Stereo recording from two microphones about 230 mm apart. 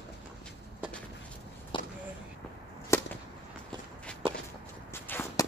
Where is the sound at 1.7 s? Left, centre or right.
Left.